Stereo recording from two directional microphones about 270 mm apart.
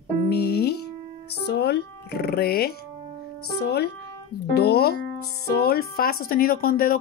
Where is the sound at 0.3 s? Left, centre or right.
Left.